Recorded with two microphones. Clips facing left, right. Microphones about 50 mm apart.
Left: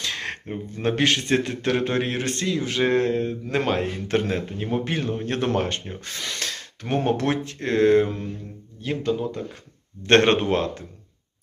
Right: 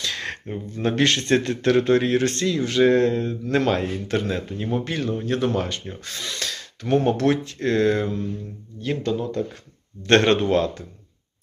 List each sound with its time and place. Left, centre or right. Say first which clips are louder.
0.0 s a sound: right 1 dB; left
0.8 s a man's voice: right 1 dB; centre; by 8.3 s left
8.8 s speech: even; centre
10.0 s a man's voice: even; left